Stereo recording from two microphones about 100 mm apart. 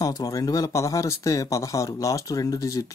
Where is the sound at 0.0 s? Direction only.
35° left (ahead or behind).